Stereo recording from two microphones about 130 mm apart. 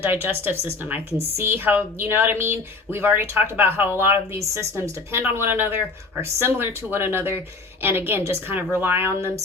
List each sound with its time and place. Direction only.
0.0 s speech: 15° right (ahead or behind)